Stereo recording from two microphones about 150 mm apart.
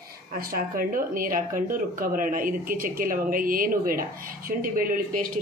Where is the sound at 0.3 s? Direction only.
75° right (ahead or behind).